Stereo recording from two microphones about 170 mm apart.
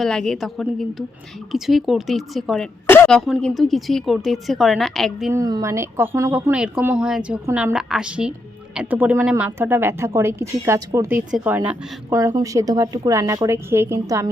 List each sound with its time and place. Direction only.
0.0 s speech: 5° left (ahead or behind)
2.8 s speech: 15° left (ahead or behind)
5.3 s speech: 20° right (ahead or behind)
11.3 s a woman's voice: 5° right (ahead or behind)